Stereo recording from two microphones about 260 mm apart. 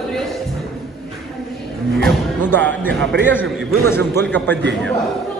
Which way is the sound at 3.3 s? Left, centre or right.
Centre.